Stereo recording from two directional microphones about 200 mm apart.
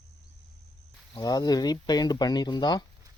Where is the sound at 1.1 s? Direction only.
20° left (ahead or behind).